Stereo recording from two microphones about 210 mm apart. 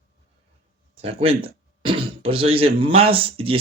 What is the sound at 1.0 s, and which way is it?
Speech, 25° right (ahead or behind).